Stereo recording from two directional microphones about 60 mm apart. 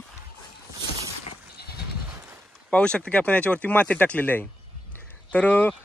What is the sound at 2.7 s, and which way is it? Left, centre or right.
A man's voice, centre.